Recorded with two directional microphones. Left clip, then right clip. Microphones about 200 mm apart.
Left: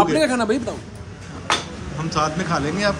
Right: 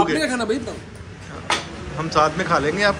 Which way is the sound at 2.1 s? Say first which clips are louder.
Right 4 dB; 15° left (ahead or behind).